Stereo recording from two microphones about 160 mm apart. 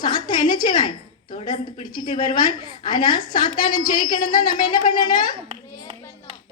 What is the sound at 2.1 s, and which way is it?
A woman's voice, 30° left (ahead or behind).